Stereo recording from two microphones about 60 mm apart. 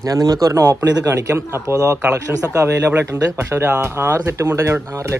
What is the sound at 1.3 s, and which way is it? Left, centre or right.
Speech, right.